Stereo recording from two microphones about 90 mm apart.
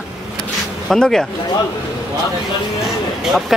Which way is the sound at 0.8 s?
5° left (ahead or behind).